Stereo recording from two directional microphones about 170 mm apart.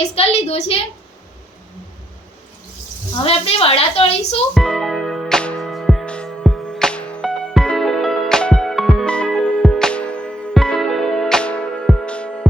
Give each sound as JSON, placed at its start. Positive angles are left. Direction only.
{"t": 0.2, "sound": "a woman's voice", "side_deg": 40}
{"t": 3.2, "sound": "a woman's voice", "side_deg": 35}
{"t": 4.5, "sound": "music", "side_deg": 5}